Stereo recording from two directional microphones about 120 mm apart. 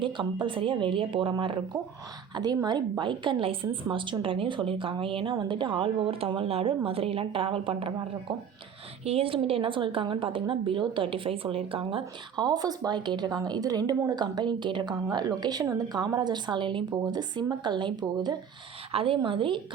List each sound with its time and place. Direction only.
0.0 s a woman's voice: 45° right (ahead or behind)
5.3 s a woman's voice: 35° right (ahead or behind)
9.0 s a woman's voice: 50° right (ahead or behind); by 18.3 s 35° right (ahead or behind)
18.9 s a woman's voice: 50° right (ahead or behind)